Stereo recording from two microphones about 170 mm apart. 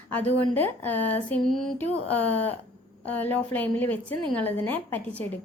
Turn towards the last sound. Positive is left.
turn(degrees=10)  # may be behind; listen again after turning